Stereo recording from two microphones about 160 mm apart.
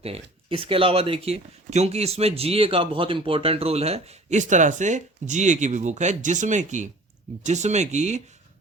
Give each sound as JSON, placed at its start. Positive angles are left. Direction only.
{"t": 0.0, "sound": "speech", "side_deg": -35}